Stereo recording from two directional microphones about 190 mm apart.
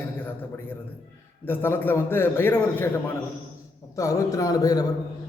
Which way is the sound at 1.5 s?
10° left (ahead or behind).